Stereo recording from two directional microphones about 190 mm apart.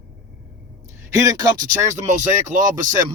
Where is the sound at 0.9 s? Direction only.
15° right (ahead or behind).